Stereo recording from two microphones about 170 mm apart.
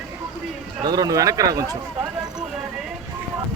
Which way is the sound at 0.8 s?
25° right (ahead or behind).